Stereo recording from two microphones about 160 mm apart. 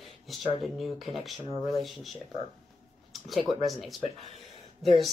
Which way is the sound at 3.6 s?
Centre (ahead or behind).